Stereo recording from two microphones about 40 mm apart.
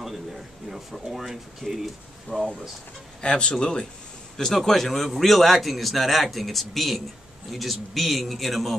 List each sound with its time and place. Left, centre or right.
0.0 s speech: centre
2.3 s speech: centre
4.6 s a man's voice: centre